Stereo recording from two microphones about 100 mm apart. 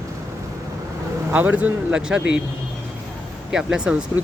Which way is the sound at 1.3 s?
15° right (ahead or behind).